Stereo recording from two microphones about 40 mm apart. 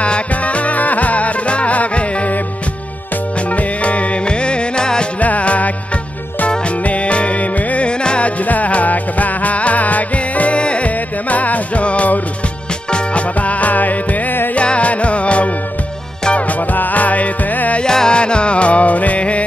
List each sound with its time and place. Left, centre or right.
0.0 s music: left
3.4 s music: left
5.2 s music: left
6.8 s music: left
8.0 s music: left
8.4 s music: left
14.5 s music: left
17.8 s music: centre; by 19.4 s left